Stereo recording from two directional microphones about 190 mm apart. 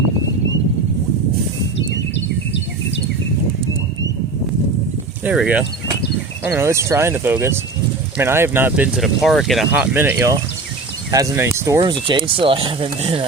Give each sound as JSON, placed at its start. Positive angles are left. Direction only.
{"t": 2.1, "sound": "bird", "side_deg": 65}
{"t": 5.2, "sound": "speech", "side_deg": -5}